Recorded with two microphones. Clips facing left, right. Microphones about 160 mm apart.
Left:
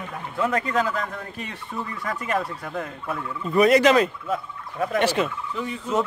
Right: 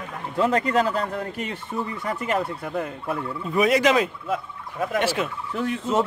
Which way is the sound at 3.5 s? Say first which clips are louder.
Left 3 dB; 5° right (ahead or behind).